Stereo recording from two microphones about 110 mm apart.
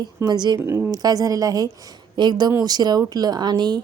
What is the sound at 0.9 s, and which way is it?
A woman's voice, 35° right (ahead or behind).